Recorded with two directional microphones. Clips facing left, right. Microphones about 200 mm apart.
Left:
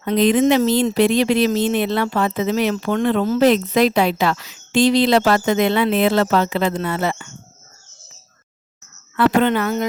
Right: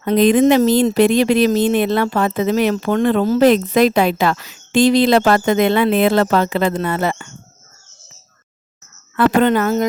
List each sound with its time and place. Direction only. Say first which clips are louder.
0.0 s speech: right 3 dB; 45° right (ahead or behind)
9.1 s a woman's voice: right 2 dB; 45° right (ahead or behind)